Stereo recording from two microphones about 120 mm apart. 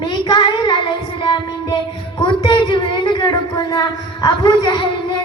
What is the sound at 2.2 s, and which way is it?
Speech, 40° left (ahead or behind).